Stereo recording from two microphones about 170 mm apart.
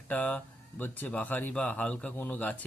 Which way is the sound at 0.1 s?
10° left (ahead or behind).